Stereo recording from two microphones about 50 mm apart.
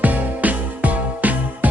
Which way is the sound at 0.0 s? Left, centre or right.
Right.